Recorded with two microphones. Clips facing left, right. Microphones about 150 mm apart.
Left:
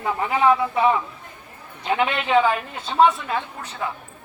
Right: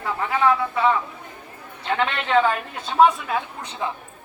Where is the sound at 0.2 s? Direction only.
20° left (ahead or behind); by 3.4 s 5° right (ahead or behind).